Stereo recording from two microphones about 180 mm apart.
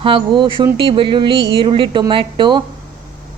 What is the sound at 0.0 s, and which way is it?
A woman's voice, 30° right (ahead or behind).